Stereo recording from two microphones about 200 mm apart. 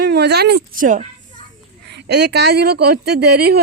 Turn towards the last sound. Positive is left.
turn(degrees=-55)  # may be behind; listen again after turning